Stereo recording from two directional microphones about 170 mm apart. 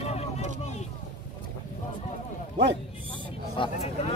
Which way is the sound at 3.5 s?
35° left (ahead or behind).